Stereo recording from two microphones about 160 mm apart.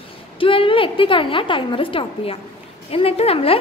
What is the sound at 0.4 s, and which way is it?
A woman's voice, 35° left (ahead or behind).